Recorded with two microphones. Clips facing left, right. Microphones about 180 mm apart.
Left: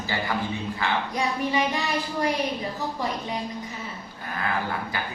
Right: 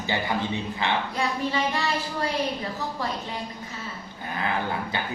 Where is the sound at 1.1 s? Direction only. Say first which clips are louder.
Left 1 dB; 15° left (ahead or behind).